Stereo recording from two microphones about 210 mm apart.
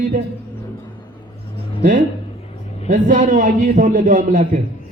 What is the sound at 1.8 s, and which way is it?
A man's voice, 40° right (ahead or behind).